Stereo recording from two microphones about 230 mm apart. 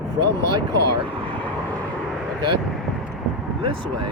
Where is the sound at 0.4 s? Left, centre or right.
Right.